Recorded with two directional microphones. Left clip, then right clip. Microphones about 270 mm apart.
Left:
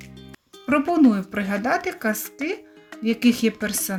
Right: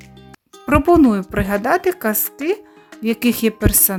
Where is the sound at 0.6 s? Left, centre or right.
Right.